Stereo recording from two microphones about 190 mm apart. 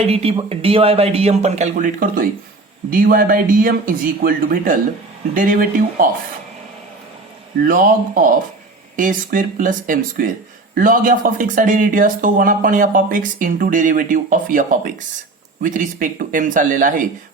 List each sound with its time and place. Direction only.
0.0 s speech: 30° right (ahead or behind); by 6.1 s 45° right (ahead or behind)
7.6 s speech: 45° right (ahead or behind)